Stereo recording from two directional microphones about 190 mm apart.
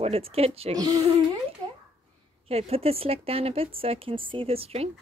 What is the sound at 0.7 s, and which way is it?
Speech, 20° right (ahead or behind).